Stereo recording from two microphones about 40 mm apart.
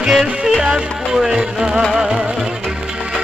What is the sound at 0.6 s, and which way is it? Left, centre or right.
Music, centre.